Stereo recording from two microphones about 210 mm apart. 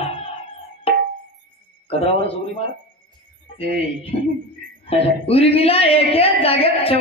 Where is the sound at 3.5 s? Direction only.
30° left (ahead or behind).